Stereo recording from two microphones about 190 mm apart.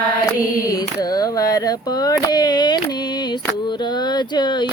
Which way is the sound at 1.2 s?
20° left (ahead or behind).